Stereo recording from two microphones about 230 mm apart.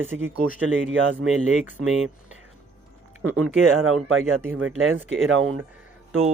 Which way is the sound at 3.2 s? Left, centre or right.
Right.